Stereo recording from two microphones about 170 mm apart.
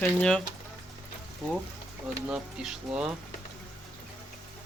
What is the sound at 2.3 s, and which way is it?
Speech, 5° right (ahead or behind).